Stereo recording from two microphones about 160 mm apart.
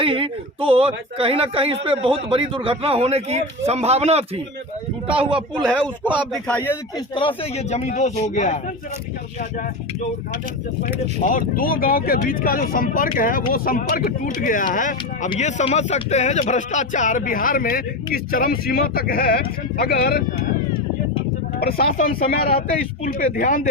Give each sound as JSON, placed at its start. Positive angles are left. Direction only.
{"t": 0.0, "sound": "speech", "side_deg": -35}
{"t": 6.1, "sound": "a man's voice", "side_deg": 10}
{"t": 7.2, "sound": "a man's voice", "side_deg": 35}
{"t": 10.8, "sound": "speech", "side_deg": 55}
{"t": 21.6, "sound": "speech", "side_deg": 70}